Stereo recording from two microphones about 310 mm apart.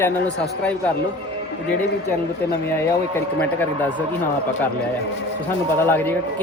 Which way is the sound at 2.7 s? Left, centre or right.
Centre.